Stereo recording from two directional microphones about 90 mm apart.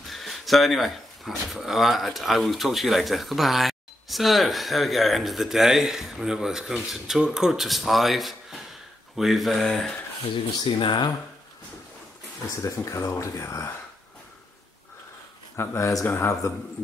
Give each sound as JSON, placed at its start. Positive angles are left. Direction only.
{"t": 0.1, "sound": "speech", "side_deg": 0}
{"t": 10.6, "sound": "speech", "side_deg": 55}
{"t": 12.6, "sound": "speech", "side_deg": 35}
{"t": 15.5, "sound": "speech", "side_deg": 30}